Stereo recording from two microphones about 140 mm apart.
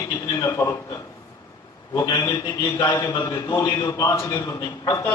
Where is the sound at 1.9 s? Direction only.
25° left (ahead or behind).